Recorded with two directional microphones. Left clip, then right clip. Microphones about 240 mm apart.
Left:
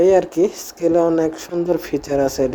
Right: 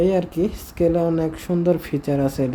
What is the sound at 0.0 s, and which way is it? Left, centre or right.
Speech, centre.